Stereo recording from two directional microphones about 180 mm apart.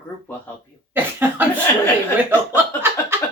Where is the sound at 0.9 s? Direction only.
10° right (ahead or behind).